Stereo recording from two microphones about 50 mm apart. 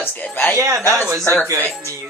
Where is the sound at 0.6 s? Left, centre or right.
Right.